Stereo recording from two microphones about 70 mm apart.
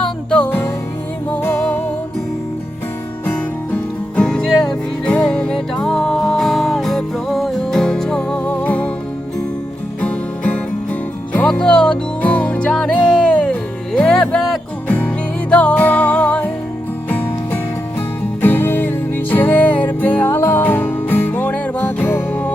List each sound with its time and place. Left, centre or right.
0.0 s music: centre
1.4 s music: left
4.2 s music: centre
8.4 s music: left
10.0 s music: centre
14.8 s music: centre